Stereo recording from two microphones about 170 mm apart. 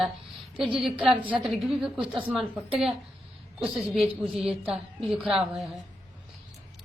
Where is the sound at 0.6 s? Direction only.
5° right (ahead or behind).